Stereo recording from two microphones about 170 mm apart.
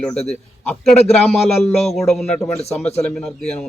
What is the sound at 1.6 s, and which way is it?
Speech, 40° left (ahead or behind).